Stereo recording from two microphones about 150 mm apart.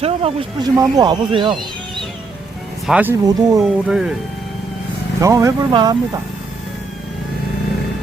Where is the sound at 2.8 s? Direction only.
10° right (ahead or behind).